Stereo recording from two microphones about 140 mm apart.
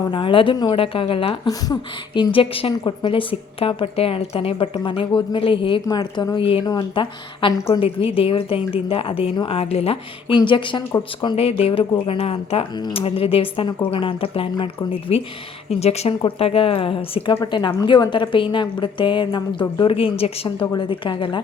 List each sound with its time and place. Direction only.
0.1 s a woman's voice: 35° left (ahead or behind)
1.5 s speech: 25° left (ahead or behind)
2.3 s a woman's voice: 40° left (ahead or behind)